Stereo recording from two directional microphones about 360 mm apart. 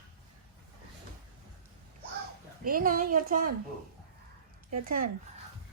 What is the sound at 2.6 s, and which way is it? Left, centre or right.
Speech, right.